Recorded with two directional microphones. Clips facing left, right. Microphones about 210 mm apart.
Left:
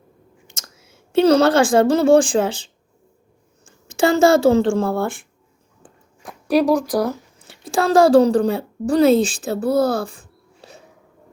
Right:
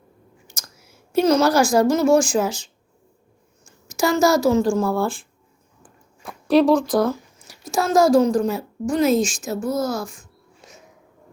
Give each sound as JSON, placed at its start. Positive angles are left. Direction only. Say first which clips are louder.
{"t": 0.8, "sound": "a woman's voice", "louder": "left 3 dB", "side_deg": 25}
{"t": 3.7, "sound": "speech", "louder": "left 3 dB", "side_deg": 30}
{"t": 5.8, "sound": "a sound", "louder": "even", "side_deg": 15}
{"t": 7.3, "sound": "a woman's voice", "louder": "left 2 dB", "side_deg": 30}